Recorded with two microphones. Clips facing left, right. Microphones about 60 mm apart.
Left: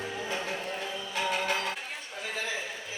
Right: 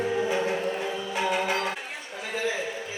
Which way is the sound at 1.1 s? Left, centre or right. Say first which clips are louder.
Right 3 dB; centre.